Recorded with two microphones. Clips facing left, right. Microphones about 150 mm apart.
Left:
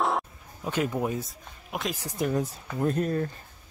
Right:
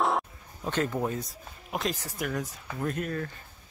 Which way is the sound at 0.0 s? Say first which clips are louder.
Even; centre (ahead or behind).